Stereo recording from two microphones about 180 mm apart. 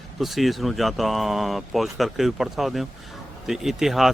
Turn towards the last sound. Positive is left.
turn(degrees=0)  # may be behind; listen again after turning